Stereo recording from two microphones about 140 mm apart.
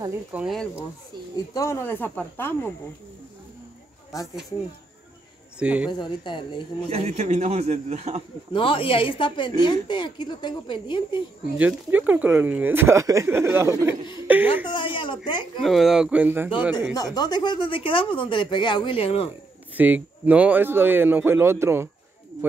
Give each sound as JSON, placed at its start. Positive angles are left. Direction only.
{"t": 0.3, "sound": "speech", "side_deg": -5}
{"t": 1.3, "sound": "speech", "side_deg": 25}
{"t": 5.6, "sound": "speech", "side_deg": -10}
{"t": 5.9, "sound": "speech", "side_deg": 35}
{"t": 6.9, "sound": "a man's voice", "side_deg": -50}
{"t": 8.5, "sound": "speech", "side_deg": 40}
{"t": 11.5, "sound": "speech", "side_deg": -10}
{"t": 14.7, "sound": "a woman's voice", "side_deg": 35}
{"t": 15.6, "sound": "speech", "side_deg": 0}
{"t": 16.9, "sound": "speech", "side_deg": 25}
{"t": 19.7, "sound": "speech", "side_deg": -10}